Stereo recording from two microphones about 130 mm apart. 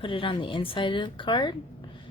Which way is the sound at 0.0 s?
40° left (ahead or behind).